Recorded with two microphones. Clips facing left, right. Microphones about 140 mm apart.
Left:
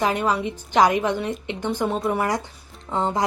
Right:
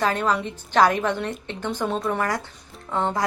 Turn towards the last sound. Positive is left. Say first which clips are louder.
# left 1 dB
turn(degrees=20)  # may be behind; listen again after turning